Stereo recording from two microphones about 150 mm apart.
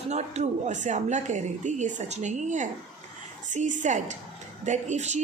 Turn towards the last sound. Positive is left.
turn(degrees=-50)  # may be behind; listen again after turning